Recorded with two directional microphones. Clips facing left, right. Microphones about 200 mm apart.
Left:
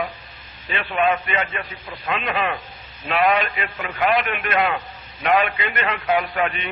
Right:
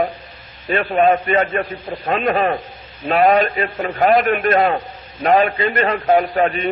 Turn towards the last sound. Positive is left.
turn(degrees=-40)  # may be behind; listen again after turning